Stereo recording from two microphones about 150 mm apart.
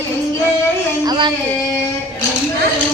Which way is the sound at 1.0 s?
30° right (ahead or behind).